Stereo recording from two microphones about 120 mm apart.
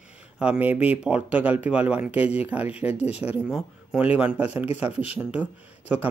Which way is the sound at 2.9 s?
60° left (ahead or behind).